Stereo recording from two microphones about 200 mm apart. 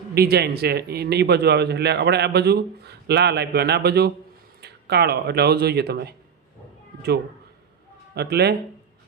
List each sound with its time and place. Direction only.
0.1 s a man's voice: 50° right (ahead or behind)
8.1 s speech: 55° right (ahead or behind)